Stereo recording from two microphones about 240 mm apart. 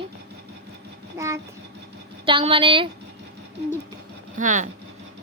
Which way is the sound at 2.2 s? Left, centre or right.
Right.